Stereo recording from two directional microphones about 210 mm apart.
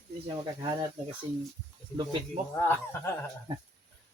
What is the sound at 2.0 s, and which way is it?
Speech, 20° right (ahead or behind).